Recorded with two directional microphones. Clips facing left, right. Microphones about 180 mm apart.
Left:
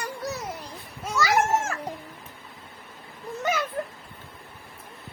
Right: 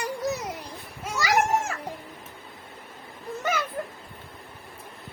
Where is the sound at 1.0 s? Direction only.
15° right (ahead or behind).